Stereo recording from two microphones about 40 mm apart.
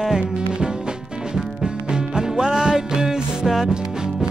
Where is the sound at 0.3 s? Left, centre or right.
Right.